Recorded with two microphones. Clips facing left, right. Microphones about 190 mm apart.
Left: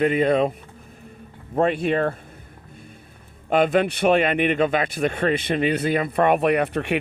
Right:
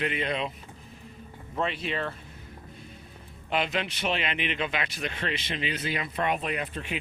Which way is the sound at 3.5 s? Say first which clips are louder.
Left 11 dB; 50° left (ahead or behind).